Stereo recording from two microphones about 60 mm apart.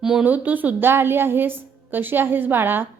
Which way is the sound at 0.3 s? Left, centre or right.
Right.